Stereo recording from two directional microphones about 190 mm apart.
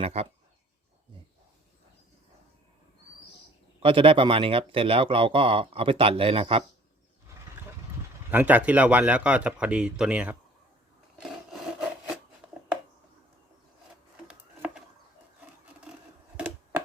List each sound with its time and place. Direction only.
0.0 s speech: 35° right (ahead or behind)
3.8 s speech: 30° right (ahead or behind)
8.3 s speech: 10° right (ahead or behind)
14.3 s a sound: 5° right (ahead or behind)
15.4 s wood: 10° right (ahead or behind)